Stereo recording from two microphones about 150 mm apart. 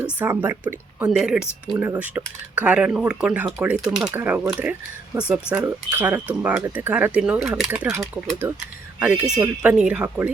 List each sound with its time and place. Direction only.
0.0 s speech: 15° right (ahead or behind)
9.0 s speech: 10° right (ahead or behind)